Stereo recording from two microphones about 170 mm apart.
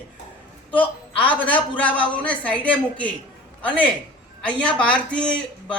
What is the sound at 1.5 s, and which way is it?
Speech, 10° left (ahead or behind).